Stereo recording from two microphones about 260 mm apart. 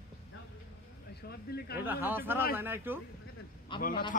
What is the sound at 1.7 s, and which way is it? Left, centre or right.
Speech, centre.